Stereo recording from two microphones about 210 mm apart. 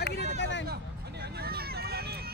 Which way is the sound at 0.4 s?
60° left (ahead or behind).